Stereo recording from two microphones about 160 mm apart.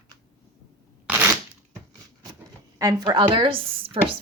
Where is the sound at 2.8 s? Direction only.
25° right (ahead or behind).